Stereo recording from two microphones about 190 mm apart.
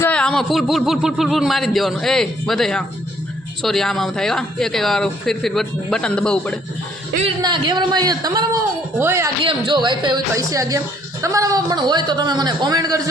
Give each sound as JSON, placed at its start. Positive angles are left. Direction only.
{"t": 0.0, "sound": "speech", "side_deg": 5}
{"t": 7.4, "sound": "speech", "side_deg": -25}
{"t": 9.4, "sound": "speech", "side_deg": -25}